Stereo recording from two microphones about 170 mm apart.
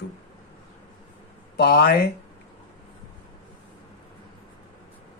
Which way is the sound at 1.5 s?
70° left (ahead or behind).